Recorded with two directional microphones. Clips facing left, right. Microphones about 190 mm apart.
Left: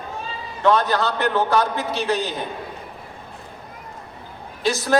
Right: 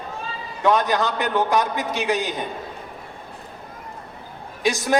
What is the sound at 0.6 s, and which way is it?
A man's voice, 15° right (ahead or behind).